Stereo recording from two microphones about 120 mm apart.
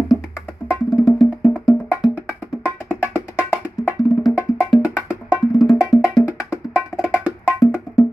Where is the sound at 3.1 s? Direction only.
15° right (ahead or behind).